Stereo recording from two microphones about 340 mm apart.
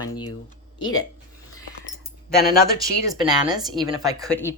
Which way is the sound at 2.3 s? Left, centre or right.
Left.